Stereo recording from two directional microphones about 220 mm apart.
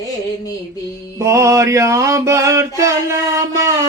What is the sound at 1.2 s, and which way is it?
Mantra, 15° right (ahead or behind).